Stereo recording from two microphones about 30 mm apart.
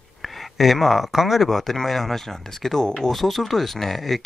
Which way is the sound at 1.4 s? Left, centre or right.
Centre.